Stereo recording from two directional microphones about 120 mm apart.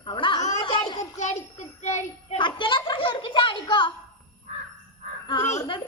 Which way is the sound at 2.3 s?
40° left (ahead or behind).